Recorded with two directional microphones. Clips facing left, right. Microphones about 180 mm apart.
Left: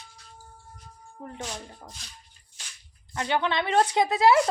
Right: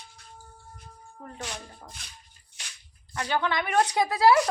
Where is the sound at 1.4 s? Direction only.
5° left (ahead or behind).